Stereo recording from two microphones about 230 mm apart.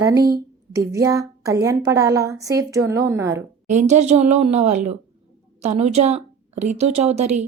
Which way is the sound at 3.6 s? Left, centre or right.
Right.